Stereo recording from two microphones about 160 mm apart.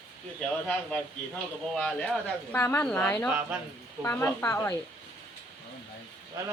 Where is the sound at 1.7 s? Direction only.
5° left (ahead or behind).